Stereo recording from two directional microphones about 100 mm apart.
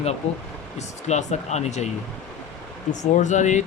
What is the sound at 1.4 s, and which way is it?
Speech, 90° left.